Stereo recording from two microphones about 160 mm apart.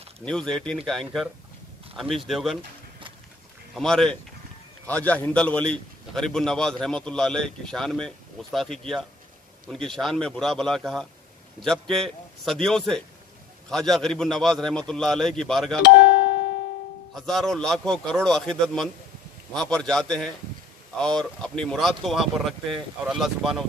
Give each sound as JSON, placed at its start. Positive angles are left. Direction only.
{"t": 0.2, "sound": "a man's voice", "side_deg": 5}
{"t": 3.7, "sound": "a man's voice", "side_deg": 0}
{"t": 15.8, "sound": "music", "side_deg": 90}
{"t": 17.1, "sound": "a man's voice", "side_deg": 0}